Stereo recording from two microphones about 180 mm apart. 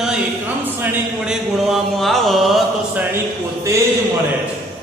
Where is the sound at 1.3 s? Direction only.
Centre (ahead or behind).